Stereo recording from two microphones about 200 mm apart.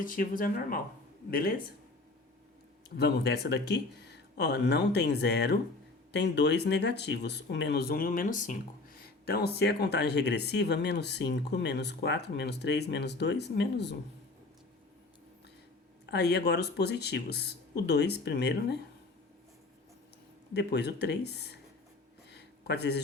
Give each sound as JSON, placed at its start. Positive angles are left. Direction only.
{"t": 0.0, "sound": "speech", "side_deg": 45}
{"t": 2.9, "sound": "speech", "side_deg": 55}
{"t": 16.0, "sound": "speech", "side_deg": 55}
{"t": 20.5, "sound": "speech", "side_deg": 55}
{"t": 22.3, "sound": "a sound", "side_deg": 55}